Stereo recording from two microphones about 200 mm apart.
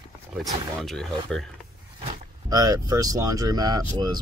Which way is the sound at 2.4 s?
20° right (ahead or behind).